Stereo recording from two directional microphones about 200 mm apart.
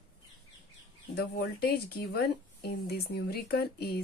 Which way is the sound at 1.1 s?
50° left (ahead or behind).